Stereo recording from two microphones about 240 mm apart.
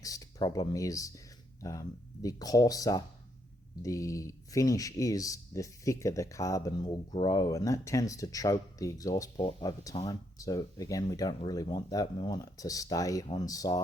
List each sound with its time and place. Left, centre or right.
0.0 s speech: centre